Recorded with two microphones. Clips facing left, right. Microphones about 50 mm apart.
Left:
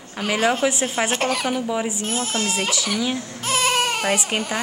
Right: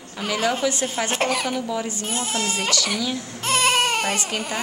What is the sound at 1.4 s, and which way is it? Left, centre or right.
Speech, centre.